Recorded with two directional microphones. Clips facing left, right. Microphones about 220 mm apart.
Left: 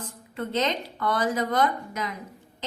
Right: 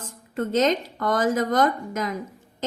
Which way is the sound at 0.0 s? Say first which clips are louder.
Right 5 dB; 45° right (ahead or behind).